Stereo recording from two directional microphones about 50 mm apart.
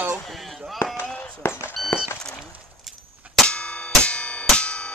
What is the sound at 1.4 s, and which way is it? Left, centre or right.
Speech, left.